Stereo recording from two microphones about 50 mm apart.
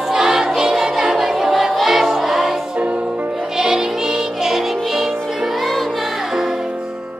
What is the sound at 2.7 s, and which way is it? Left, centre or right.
Music, right.